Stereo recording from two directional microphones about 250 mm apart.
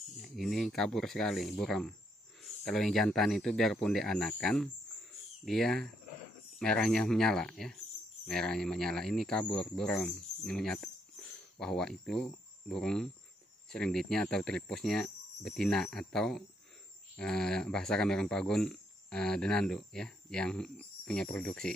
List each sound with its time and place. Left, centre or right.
0.2 s speech: centre